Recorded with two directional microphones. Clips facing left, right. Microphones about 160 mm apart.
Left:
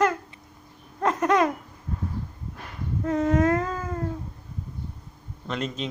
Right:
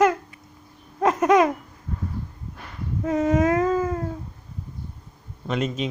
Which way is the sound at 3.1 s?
10° right (ahead or behind).